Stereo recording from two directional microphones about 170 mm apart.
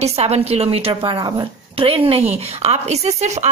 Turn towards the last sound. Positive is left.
turn(degrees=-40)  # may be behind; listen again after turning